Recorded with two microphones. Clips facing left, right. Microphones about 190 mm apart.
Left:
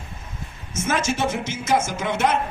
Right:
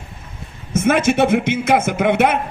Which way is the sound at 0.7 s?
60° right (ahead or behind).